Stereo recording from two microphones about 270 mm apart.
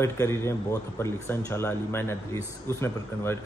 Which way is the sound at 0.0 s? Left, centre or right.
Centre.